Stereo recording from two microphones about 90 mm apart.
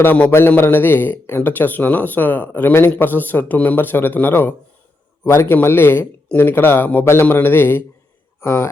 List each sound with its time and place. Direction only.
0.0 s speech: 20° left (ahead or behind)